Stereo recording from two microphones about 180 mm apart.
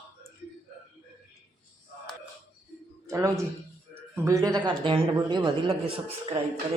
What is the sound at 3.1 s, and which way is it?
Speech, 15° right (ahead or behind).